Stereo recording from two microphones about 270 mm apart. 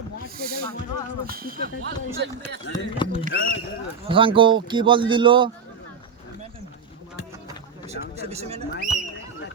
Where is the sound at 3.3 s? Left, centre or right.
Left.